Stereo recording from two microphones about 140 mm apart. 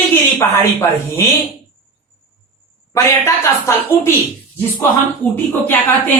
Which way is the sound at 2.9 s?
20° left (ahead or behind).